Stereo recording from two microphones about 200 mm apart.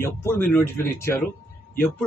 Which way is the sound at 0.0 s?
15° left (ahead or behind).